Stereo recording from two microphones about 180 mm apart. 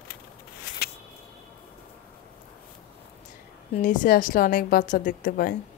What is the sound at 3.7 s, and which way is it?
A woman's voice, 45° left (ahead or behind).